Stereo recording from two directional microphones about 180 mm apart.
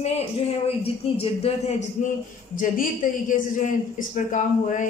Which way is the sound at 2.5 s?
50° left (ahead or behind).